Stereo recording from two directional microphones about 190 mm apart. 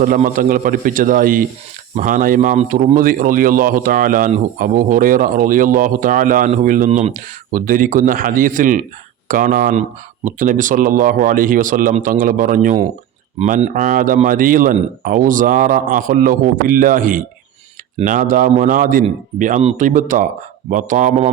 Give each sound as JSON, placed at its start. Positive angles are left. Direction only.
{"t": 0.0, "sound": "speech", "side_deg": -45}